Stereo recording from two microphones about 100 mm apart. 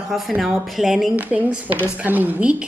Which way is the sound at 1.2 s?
15° right (ahead or behind).